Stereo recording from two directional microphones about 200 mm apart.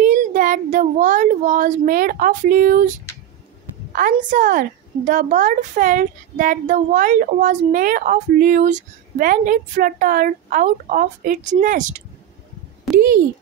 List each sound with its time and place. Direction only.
0.0 s speech: 40° right (ahead or behind)
3.9 s a woman's voice: 40° right (ahead or behind)
12.9 s a sound: 50° right (ahead or behind)